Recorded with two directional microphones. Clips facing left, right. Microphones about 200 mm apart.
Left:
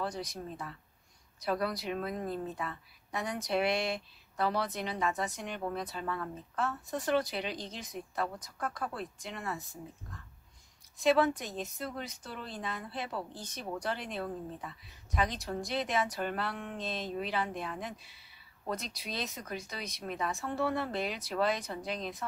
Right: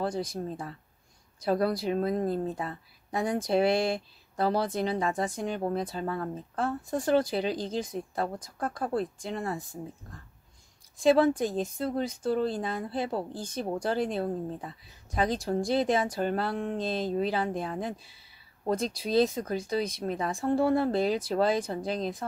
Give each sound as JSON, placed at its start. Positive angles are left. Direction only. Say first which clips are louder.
{"t": 0.0, "sound": "speech", "louder": "right 6 dB", "side_deg": -30}
{"t": 11.0, "sound": "speech", "louder": "right 5 dB", "side_deg": -30}